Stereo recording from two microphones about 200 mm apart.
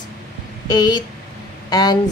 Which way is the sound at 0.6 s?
20° left (ahead or behind).